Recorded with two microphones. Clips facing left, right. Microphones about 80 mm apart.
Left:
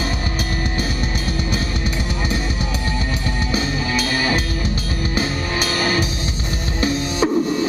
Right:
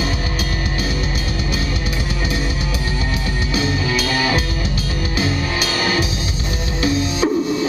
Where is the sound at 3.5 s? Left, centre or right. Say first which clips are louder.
Right 3 dB; left.